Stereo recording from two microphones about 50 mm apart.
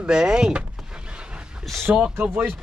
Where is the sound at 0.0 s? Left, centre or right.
Centre.